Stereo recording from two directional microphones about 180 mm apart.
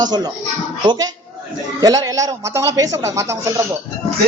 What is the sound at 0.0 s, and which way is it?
A man's voice, 20° right (ahead or behind).